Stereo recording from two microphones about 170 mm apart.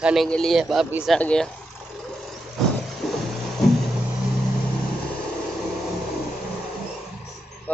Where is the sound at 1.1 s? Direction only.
5° left (ahead or behind).